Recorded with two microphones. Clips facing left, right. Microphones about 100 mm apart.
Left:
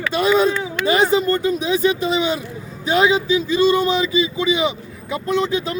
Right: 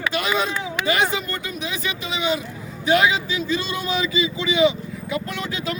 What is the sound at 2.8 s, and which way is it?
A man's voice, 25° left (ahead or behind).